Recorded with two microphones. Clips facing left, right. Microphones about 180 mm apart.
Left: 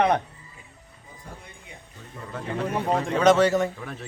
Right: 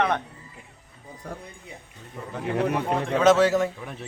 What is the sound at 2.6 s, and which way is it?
Speech, 65° right (ahead or behind).